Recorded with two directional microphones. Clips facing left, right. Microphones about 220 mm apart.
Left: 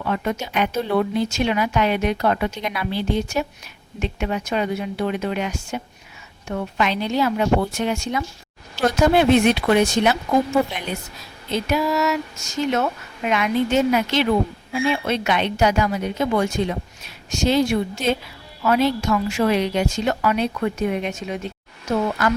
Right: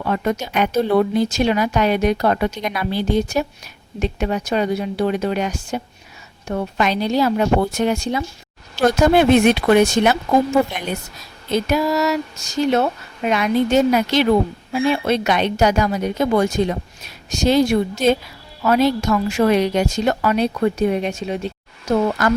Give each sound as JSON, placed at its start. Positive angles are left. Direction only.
{"t": 0.0, "sound": "a woman's voice", "side_deg": -40}
{"t": 9.0, "sound": "speech", "side_deg": -45}
{"t": 11.5, "sound": "a woman's voice", "side_deg": -40}